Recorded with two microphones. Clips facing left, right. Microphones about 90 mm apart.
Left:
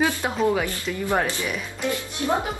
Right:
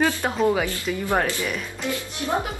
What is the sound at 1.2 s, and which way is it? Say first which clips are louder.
Speech: right 1 dB; 20° left (ahead or behind).